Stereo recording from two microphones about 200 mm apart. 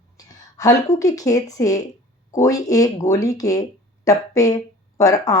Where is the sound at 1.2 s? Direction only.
15° left (ahead or behind).